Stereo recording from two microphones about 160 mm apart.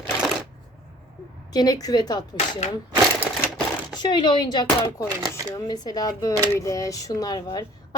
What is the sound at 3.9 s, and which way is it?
Speech, 30° left (ahead or behind).